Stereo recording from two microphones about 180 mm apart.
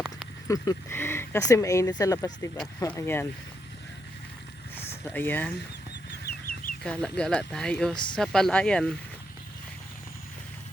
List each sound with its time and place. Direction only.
0.4 s speech: 20° left (ahead or behind)
5.0 s speech: 10° left (ahead or behind)
6.2 s chicken: 55° left (ahead or behind)
6.8 s speech: 5° left (ahead or behind)